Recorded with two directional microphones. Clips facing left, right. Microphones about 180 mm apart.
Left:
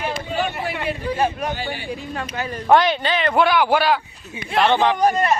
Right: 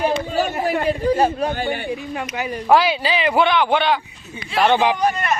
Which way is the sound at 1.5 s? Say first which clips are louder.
Right 4 dB; 55° right (ahead or behind).